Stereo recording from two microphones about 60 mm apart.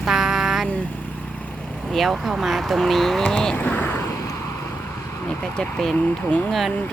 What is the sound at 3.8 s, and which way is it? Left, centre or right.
Vehicle, left.